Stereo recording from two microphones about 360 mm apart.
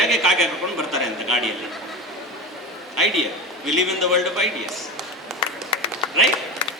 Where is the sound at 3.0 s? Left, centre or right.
Centre.